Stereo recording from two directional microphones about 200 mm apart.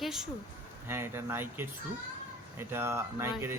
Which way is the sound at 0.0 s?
Centre (ahead or behind).